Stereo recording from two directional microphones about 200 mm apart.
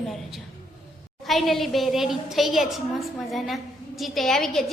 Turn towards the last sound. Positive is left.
turn(degrees=0)  # may be behind; listen again after turning